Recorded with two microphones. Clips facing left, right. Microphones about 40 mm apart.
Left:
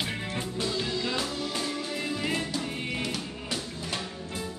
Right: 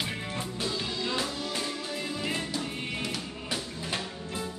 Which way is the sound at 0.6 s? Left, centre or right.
Centre.